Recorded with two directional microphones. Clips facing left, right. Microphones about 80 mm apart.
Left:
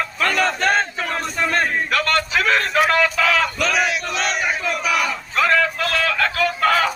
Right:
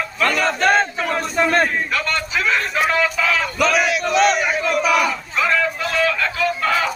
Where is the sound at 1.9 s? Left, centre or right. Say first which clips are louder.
Left 3 dB; left.